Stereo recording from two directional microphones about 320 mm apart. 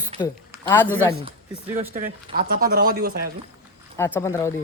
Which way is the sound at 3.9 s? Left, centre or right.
Centre.